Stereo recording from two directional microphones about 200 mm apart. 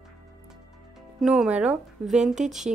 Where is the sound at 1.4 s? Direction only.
5° right (ahead or behind).